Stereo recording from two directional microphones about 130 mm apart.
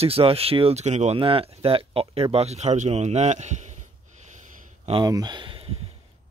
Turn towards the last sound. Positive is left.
turn(degrees=-40)  # may be behind; listen again after turning